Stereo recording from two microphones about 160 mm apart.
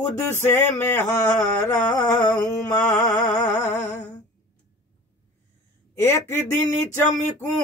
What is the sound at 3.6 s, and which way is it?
Humming, 45° left (ahead or behind).